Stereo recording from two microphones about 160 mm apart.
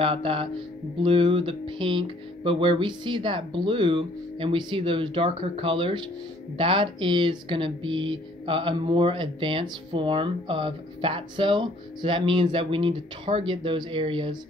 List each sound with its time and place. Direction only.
0.0 s speech: 35° right (ahead or behind)